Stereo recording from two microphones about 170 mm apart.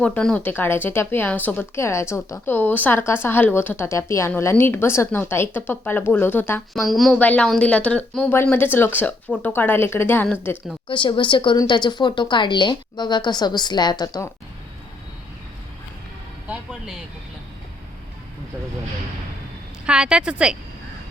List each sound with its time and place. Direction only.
0.0 s speech: 5° left (ahead or behind)
6.7 s a woman's voice: centre (ahead or behind)
10.8 s a woman's voice: 30° left (ahead or behind)
19.8 s a woman's voice: 5° right (ahead or behind)